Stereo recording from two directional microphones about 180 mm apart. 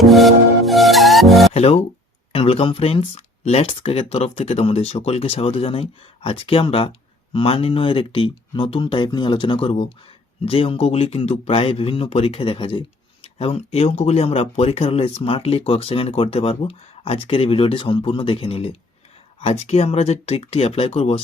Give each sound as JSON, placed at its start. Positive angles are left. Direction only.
{"t": 0.0, "sound": "music", "side_deg": 0}
{"t": 1.5, "sound": "speech", "side_deg": 35}